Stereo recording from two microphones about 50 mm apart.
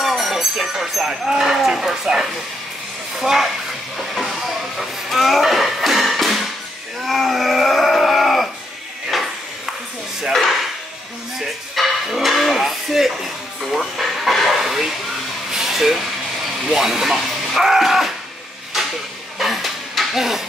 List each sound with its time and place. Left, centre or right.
0.0 s speech: centre
4.0 s music: centre
7.1 s livestock: centre
9.1 s ping: centre
11.3 s a sound: centre
16.6 s speech: centre
19.3 s a sound: centre